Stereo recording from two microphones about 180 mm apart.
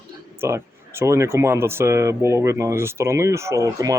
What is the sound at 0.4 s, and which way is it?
Speech, 15° right (ahead or behind).